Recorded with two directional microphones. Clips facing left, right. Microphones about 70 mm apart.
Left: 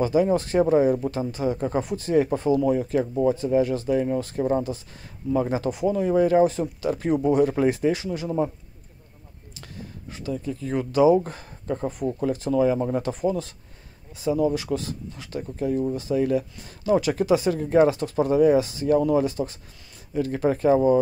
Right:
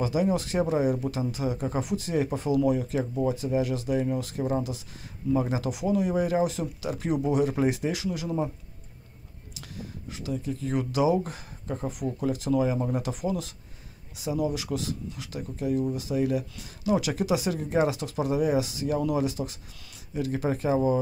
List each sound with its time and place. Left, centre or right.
0.0 s speech: left
10.1 s speech: left